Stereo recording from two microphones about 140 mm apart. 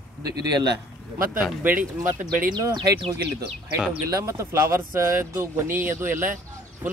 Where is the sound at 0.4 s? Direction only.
30° right (ahead or behind).